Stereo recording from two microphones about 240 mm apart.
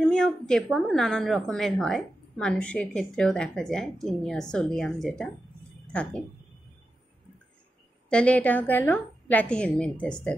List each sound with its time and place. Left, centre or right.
0.0 s a woman's voice: centre
8.1 s a woman's voice: centre